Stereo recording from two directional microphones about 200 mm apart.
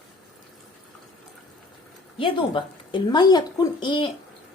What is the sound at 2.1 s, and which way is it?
Speech, 25° left (ahead or behind).